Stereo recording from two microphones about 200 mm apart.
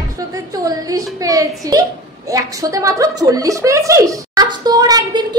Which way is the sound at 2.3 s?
15° right (ahead or behind).